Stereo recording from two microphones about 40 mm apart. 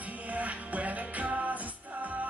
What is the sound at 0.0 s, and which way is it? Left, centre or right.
Music, right.